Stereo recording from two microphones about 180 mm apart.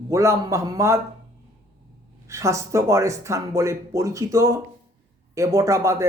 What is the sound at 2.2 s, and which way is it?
Speech, 15° right (ahead or behind).